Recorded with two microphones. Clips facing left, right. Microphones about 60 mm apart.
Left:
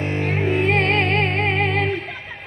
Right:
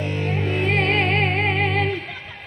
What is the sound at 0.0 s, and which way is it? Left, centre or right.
Music, left.